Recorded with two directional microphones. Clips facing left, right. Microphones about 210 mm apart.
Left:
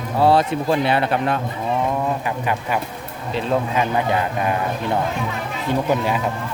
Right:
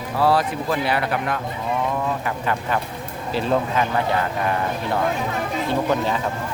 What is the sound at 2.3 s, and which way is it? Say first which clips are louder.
Speech: left 1 dB; 15° left (ahead or behind).